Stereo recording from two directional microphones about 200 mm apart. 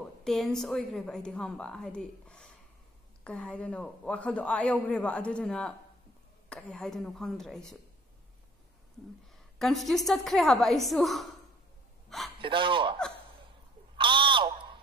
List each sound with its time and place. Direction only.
0.2 s a man's voice: centre (ahead or behind)
9.6 s a man's voice: centre (ahead or behind)
12.4 s speech: 25° right (ahead or behind)
13.9 s a sound: 25° right (ahead or behind)